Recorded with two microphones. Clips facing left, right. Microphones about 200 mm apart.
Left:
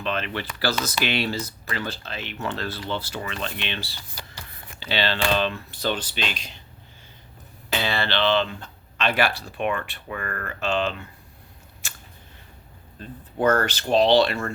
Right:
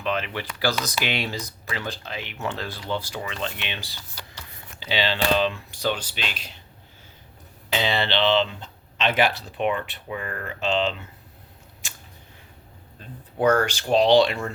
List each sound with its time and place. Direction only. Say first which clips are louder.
0.0 s speech: right 1 dB; 10° right (ahead or behind)
4.1 s a sound: left 1 dB; 15° left (ahead or behind)
4.8 s speech: even; 15° right (ahead or behind)
7.7 s speech: right 2 dB; 20° right (ahead or behind)
11.8 s a sound: even; 15° right (ahead or behind)
13.4 s speech: right 1 dB; 10° right (ahead or behind)